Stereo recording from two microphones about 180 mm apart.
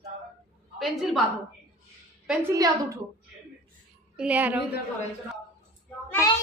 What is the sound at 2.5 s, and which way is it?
Speech, 20° right (ahead or behind).